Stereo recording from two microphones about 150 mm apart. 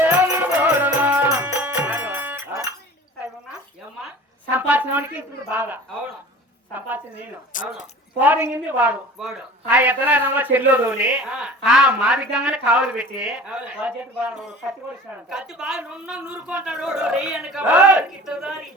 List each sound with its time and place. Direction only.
0.0 s music: 10° right (ahead or behind)
4.5 s a sound: 10° right (ahead or behind)
6.7 s speech: 10° right (ahead or behind)
7.5 s speech: 60° left (ahead or behind)
8.2 s speech: 10° right (ahead or behind)